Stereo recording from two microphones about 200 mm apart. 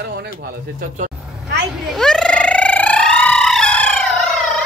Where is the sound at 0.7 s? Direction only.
40° right (ahead or behind).